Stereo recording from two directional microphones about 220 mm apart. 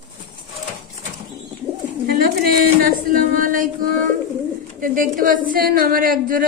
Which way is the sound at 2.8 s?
40° right (ahead or behind).